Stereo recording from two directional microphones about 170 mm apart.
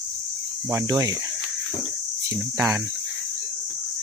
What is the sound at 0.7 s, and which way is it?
Speech, 15° right (ahead or behind).